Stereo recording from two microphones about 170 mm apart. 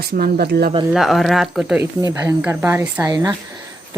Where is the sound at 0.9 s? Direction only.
Centre (ahead or behind).